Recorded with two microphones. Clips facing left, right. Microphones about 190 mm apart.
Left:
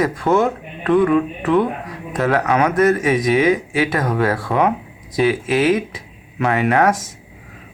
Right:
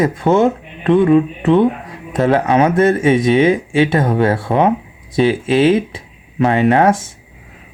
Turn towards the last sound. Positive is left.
turn(degrees=-25)  # may be behind; listen again after turning